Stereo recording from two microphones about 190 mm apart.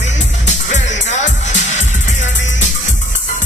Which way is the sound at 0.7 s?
40° left (ahead or behind).